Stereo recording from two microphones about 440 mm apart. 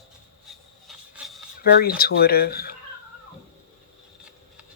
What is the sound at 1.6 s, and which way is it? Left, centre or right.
Speech, left.